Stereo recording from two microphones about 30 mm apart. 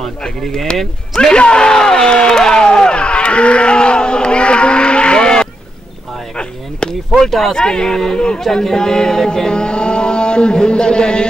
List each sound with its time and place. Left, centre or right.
1.3 s speech: left
2.9 s a sound: left
6.3 s chop: left
7.2 s speech: centre
7.5 s music: left
9.5 s a sound: left